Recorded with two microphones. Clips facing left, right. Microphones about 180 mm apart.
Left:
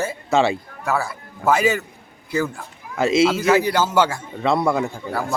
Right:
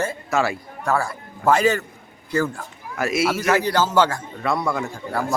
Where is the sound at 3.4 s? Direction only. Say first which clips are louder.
Left 2 dB; 5° left (ahead or behind).